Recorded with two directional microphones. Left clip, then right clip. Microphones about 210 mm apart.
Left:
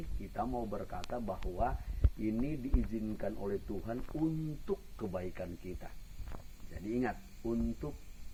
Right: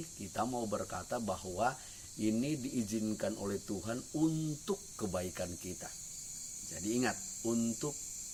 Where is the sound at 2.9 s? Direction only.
20° right (ahead or behind).